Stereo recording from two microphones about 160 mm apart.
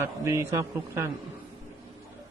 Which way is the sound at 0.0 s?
15° right (ahead or behind).